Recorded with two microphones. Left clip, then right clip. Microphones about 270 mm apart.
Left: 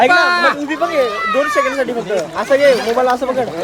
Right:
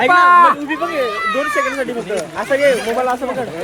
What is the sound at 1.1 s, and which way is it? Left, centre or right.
Speech, centre.